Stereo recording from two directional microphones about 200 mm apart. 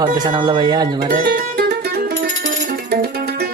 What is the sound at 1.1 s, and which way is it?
Music, 45° right (ahead or behind).